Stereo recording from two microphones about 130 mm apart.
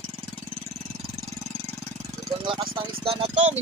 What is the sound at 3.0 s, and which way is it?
Speech, 50° right (ahead or behind).